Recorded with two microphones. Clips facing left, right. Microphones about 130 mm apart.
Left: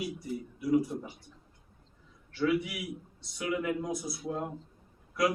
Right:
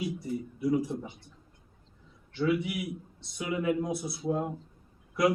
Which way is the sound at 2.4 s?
25° right (ahead or behind).